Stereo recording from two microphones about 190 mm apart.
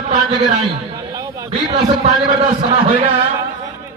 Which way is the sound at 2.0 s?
30° right (ahead or behind).